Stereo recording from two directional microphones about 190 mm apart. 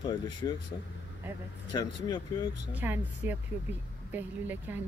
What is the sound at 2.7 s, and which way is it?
A woman's voice, 10° right (ahead or behind).